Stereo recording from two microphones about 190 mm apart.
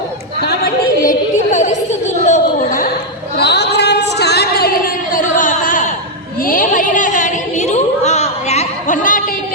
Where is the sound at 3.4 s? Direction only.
60° left (ahead or behind).